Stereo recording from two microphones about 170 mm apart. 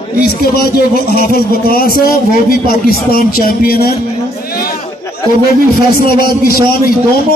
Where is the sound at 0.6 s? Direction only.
65° left (ahead or behind).